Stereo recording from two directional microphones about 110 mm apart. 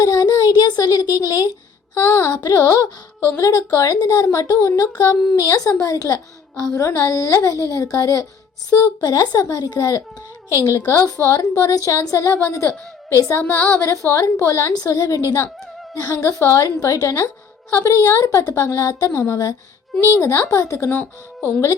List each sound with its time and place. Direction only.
0.0 s a woman's voice: 35° left (ahead or behind)